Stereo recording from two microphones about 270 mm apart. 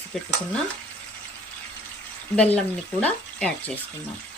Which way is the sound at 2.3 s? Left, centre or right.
Centre.